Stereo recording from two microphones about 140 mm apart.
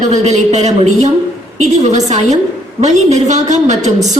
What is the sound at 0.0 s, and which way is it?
A woman's voice, 55° right (ahead or behind).